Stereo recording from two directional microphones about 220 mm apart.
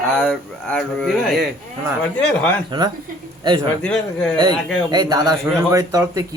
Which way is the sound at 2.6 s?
20° right (ahead or behind).